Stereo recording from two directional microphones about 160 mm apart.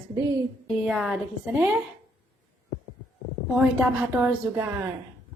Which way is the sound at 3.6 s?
5° right (ahead or behind).